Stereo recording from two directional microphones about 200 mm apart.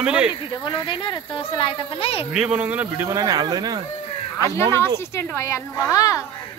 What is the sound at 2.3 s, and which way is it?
Speech, 5° right (ahead or behind).